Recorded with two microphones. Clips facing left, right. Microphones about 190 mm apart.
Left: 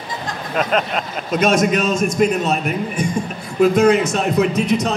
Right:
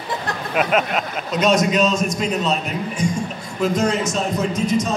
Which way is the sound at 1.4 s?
50° left (ahead or behind).